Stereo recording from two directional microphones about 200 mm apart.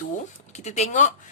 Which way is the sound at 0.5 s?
35° left (ahead or behind).